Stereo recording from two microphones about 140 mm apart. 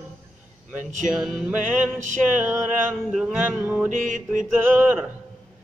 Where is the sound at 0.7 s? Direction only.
65° right (ahead or behind).